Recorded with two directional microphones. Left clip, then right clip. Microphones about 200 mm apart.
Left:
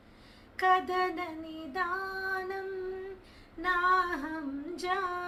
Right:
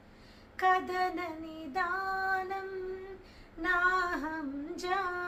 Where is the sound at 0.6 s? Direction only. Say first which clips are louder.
Left 2 dB; 5° left (ahead or behind).